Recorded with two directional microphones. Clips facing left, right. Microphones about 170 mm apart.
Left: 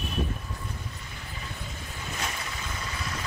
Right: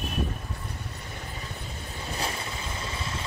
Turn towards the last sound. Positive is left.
turn(degrees=-25)  # may be behind; listen again after turning